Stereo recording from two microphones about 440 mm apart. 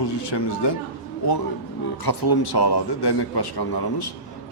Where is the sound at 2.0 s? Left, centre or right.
Left.